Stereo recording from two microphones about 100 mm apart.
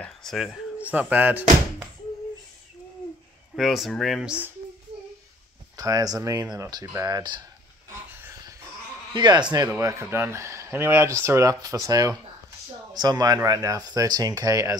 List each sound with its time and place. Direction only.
0.0 s speech: 5° left (ahead or behind)
0.7 s speech: 15° right (ahead or behind)
3.5 s speech: centre (ahead or behind)
5.8 s speech: 35° right (ahead or behind)
8.1 s a sound: 20° right (ahead or behind)
9.1 s speech: 45° right (ahead or behind)
9.8 s speech: 30° right (ahead or behind)